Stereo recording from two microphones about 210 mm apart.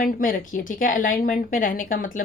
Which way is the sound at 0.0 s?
40° left (ahead or behind).